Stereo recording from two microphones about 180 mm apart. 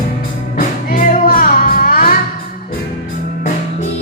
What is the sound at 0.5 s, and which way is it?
Music, 50° left (ahead or behind).